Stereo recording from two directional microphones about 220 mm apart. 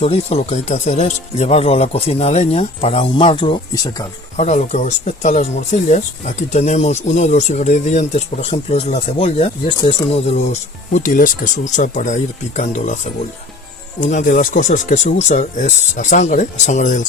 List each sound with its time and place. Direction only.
0.0 s speech: 25° left (ahead or behind)
14.0 s speech: 35° left (ahead or behind)